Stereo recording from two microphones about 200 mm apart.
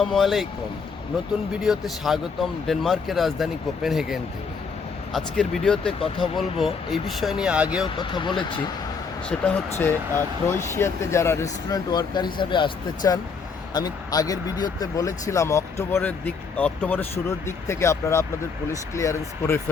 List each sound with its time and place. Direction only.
0.0 s speech: centre (ahead or behind)
1.6 s speech: centre (ahead or behind)
7.9 s speech: 25° left (ahead or behind)
9.4 s speech: 10° left (ahead or behind)